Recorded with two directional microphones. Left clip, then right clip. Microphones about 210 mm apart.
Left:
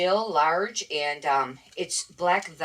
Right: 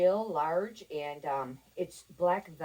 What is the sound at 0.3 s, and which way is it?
Speech, centre (ahead or behind).